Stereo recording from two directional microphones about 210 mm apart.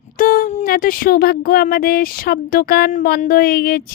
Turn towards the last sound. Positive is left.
turn(degrees=45)  # may be behind; listen again after turning